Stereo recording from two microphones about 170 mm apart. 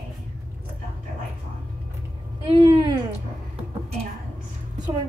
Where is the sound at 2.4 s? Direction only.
30° right (ahead or behind).